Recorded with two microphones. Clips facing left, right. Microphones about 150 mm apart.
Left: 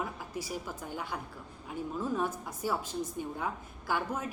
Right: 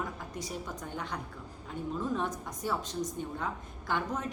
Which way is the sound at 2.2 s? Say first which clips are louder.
Left 1 dB; 5° left (ahead or behind).